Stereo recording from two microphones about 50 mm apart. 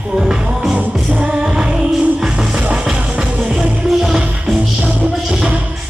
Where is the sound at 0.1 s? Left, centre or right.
Centre.